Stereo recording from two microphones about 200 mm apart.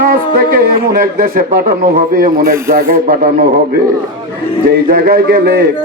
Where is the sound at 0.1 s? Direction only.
50° right (ahead or behind).